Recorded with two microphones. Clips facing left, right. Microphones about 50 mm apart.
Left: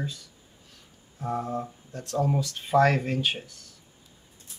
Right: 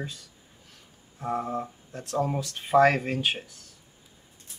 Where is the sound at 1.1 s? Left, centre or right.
Centre.